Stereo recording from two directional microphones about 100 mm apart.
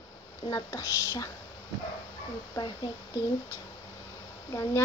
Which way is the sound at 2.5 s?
45° left (ahead or behind).